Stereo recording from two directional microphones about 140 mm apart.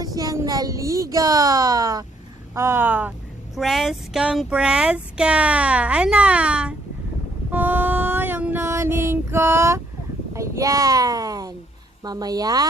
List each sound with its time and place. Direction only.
0.0 s a woman's voice: 25° right (ahead or behind)
3.5 s speech: centre (ahead or behind)
7.5 s a sound: 15° right (ahead or behind)
10.3 s a child's voice: 20° right (ahead or behind)